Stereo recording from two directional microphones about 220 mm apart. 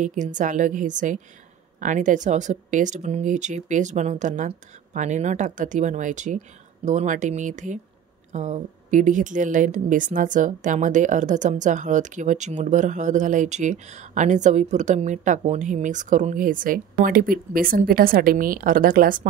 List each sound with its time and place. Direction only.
0.0 s speech: 35° right (ahead or behind)